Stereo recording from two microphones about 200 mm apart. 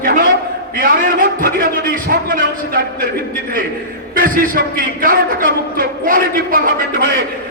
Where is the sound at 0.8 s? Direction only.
45° right (ahead or behind).